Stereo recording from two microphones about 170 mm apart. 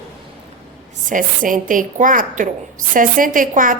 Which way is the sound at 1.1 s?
50° right (ahead or behind).